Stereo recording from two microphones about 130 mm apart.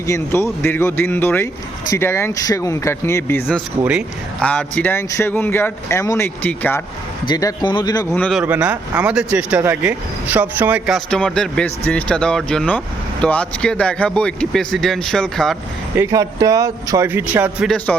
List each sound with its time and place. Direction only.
0.1 s speech: 20° left (ahead or behind)
7.3 s speech: 30° left (ahead or behind)
8.1 s speech: 10° left (ahead or behind)
8.4 s speech: 10° right (ahead or behind)
11.1 s speech: 5° left (ahead or behind)
16.0 s speech: 25° right (ahead or behind)